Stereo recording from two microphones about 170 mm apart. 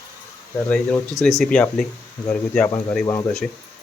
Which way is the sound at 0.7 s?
5° left (ahead or behind).